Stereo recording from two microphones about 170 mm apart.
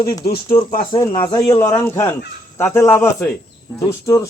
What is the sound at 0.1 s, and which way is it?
A man's voice, 30° left (ahead or behind).